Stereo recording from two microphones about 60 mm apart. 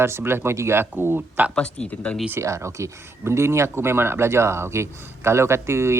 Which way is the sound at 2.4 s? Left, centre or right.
Right.